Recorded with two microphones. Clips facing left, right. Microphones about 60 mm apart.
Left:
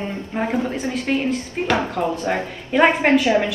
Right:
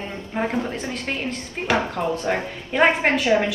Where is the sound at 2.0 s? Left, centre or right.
Left.